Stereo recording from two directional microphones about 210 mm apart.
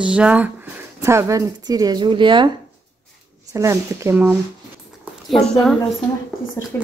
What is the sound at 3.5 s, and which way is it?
Speech, 15° right (ahead or behind).